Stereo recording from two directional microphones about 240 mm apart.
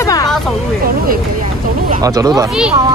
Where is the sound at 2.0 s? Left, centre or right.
Centre.